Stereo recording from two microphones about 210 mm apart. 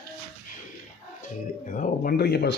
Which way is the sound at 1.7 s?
45° left (ahead or behind).